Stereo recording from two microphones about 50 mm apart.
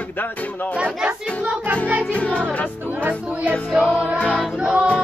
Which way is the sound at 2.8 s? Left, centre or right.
Right.